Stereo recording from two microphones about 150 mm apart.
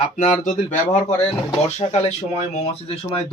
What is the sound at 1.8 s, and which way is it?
Speech, 45° left (ahead or behind).